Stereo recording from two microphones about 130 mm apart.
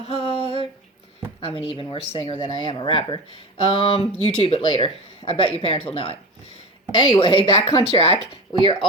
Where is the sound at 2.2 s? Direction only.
40° left (ahead or behind).